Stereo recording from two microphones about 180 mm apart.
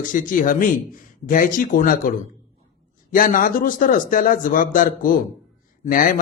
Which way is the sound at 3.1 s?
50° left (ahead or behind).